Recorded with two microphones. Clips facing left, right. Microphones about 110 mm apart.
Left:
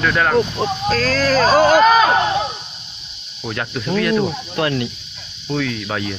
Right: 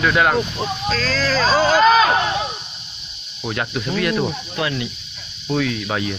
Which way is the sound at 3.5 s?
5° right (ahead or behind).